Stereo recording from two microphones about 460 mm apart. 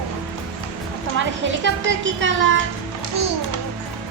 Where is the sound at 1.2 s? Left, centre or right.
Right.